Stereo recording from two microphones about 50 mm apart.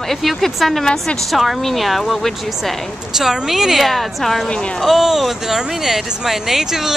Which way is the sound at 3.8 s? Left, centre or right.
Centre.